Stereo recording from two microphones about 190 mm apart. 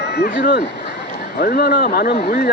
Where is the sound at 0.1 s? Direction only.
60° left (ahead or behind).